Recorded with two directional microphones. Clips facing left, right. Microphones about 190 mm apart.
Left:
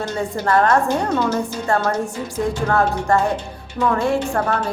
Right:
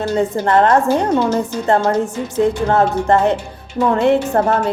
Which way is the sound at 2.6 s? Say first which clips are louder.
Right 4 dB; 20° right (ahead or behind).